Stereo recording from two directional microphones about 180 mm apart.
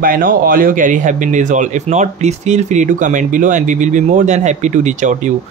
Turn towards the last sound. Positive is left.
turn(degrees=-40)  # may be behind; listen again after turning